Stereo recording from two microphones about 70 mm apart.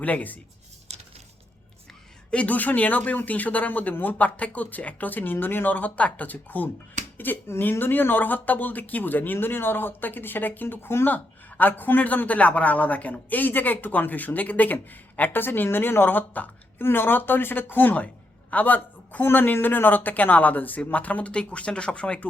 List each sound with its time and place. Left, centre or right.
0.0 s speech: left
2.3 s speech: left